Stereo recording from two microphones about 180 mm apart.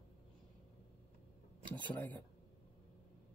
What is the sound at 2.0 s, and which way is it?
Speech, 10° left (ahead or behind).